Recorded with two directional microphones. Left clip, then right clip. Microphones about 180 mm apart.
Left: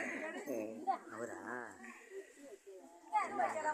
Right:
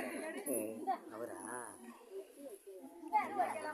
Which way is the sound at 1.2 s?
35° left (ahead or behind).